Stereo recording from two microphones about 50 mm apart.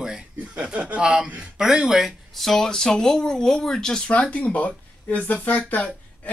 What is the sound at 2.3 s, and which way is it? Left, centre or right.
Speech, centre.